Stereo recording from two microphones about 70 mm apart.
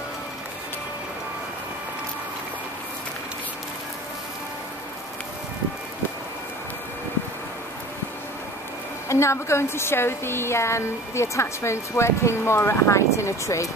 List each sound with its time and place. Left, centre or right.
9.1 s a woman's voice: left